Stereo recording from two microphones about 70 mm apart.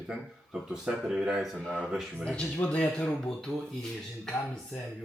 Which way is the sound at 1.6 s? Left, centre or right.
Centre.